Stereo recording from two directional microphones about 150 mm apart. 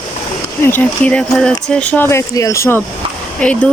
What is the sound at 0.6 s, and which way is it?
Speech, 10° left (ahead or behind).